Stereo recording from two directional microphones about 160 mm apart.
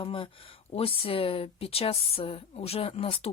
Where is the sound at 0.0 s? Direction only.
35° left (ahead or behind).